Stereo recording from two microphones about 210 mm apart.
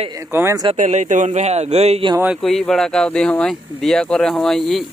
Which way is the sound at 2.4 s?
Centre (ahead or behind).